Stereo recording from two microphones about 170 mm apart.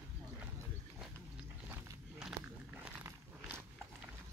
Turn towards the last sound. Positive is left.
turn(degrees=-10)  # may be behind; listen again after turning